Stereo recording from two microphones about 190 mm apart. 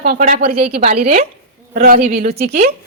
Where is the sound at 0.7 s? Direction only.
35° right (ahead or behind).